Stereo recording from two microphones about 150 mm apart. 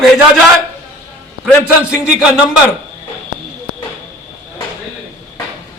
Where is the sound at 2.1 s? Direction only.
5° right (ahead or behind).